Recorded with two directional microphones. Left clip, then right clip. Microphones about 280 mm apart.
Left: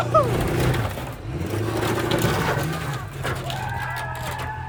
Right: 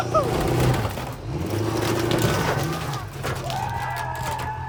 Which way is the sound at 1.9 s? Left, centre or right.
Centre.